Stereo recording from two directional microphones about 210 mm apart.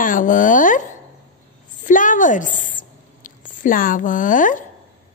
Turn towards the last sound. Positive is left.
turn(degrees=40)  # may be behind; listen again after turning